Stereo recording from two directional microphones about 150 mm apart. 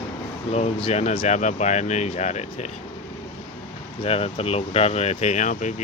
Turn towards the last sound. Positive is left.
turn(degrees=55)  # may be behind; listen again after turning